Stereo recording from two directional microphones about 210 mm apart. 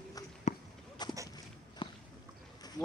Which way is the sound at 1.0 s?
20° left (ahead or behind).